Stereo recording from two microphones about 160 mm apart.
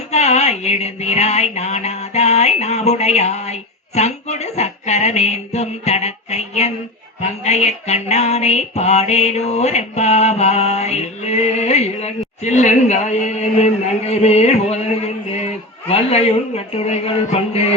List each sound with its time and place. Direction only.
0.1 s music: 45° left (ahead or behind)
15.9 s speech: 40° left (ahead or behind)